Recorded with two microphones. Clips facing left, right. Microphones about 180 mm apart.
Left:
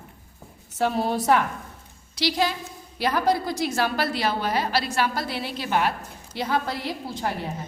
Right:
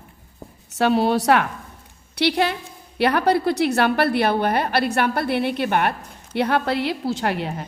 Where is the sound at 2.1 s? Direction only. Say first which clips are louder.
Right 4 dB; 60° right (ahead or behind).